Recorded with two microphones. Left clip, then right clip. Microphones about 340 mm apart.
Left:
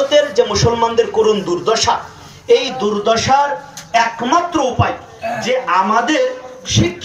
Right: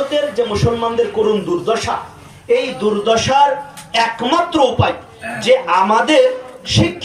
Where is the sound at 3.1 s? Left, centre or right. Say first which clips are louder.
Right 1 dB; centre.